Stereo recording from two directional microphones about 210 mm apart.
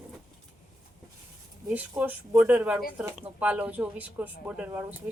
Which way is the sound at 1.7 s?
10° right (ahead or behind).